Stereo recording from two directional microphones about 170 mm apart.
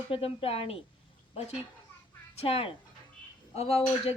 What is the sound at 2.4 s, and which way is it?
A woman's voice, 35° left (ahead or behind).